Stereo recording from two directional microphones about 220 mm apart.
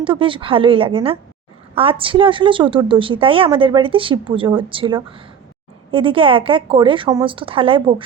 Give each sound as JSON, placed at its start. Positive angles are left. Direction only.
{"t": 0.0, "sound": "a woman's voice", "side_deg": -25}